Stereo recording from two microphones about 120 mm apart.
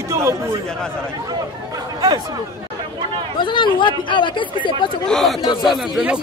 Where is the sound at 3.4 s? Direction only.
40° left (ahead or behind).